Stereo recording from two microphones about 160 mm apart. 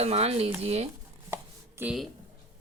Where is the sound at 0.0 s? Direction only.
40° right (ahead or behind).